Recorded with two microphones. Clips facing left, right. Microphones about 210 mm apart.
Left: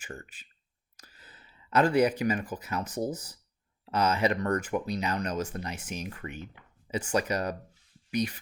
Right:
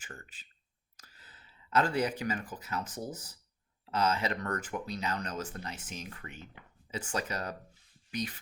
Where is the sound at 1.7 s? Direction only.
15° left (ahead or behind).